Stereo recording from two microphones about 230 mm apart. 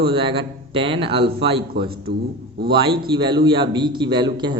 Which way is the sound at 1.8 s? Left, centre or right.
Right.